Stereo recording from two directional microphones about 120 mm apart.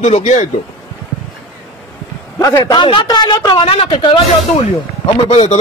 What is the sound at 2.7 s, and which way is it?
Speech, 40° left (ahead or behind).